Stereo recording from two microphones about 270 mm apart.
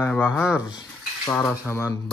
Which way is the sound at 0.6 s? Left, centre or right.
Centre.